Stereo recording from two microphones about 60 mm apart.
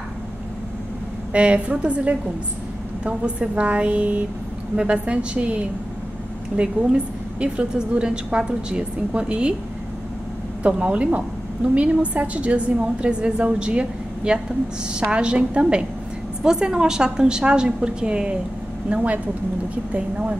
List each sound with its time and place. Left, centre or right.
1.3 s a woman's voice: centre
10.6 s a woman's voice: right